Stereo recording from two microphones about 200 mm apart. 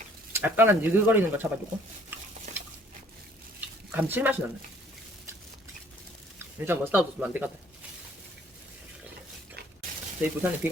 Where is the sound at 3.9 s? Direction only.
10° right (ahead or behind).